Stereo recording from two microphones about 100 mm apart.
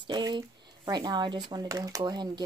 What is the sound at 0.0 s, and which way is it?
A woman's voice, 45° right (ahead or behind).